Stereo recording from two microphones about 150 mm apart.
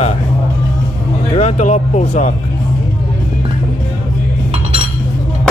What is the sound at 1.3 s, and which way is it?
Speech, 50° left (ahead or behind).